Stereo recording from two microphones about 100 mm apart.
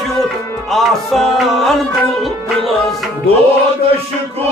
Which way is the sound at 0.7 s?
Centre (ahead or behind).